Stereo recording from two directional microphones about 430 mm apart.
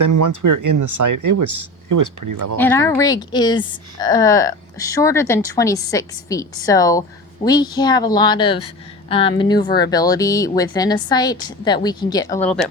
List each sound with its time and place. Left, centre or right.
0.0 s speech: right
2.6 s speech: centre